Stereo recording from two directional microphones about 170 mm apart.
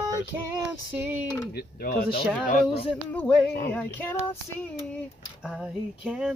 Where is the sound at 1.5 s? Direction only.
65° left (ahead or behind).